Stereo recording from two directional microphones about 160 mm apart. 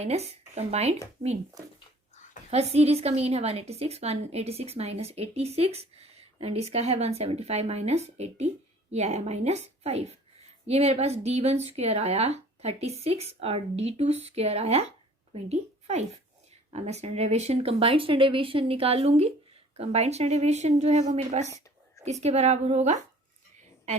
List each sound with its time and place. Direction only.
0.0 s a woman's voice: 40° right (ahead or behind)
2.5 s a woman's voice: 40° right (ahead or behind)
23.6 s a sound: 45° right (ahead or behind)